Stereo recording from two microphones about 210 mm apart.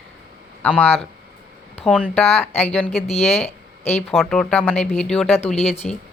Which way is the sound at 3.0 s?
30° left (ahead or behind).